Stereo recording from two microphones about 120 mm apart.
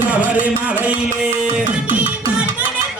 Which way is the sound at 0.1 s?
10° right (ahead or behind).